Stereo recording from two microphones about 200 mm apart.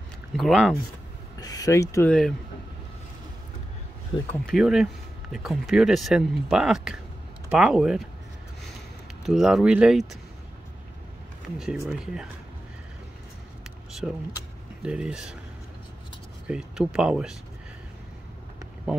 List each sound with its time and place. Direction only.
0.4 s speech: centre (ahead or behind)
1.4 s speech: 20° left (ahead or behind)
4.3 s speech: centre (ahead or behind)
9.2 s speech: centre (ahead or behind)
11.5 s speech: 5° right (ahead or behind)
14.0 s speech: 5° right (ahead or behind)
16.4 s speech: 5° right (ahead or behind)